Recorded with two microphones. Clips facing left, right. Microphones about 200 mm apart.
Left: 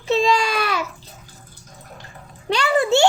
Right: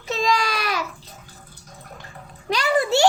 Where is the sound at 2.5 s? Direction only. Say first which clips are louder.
Left 2 dB; 30° left (ahead or behind).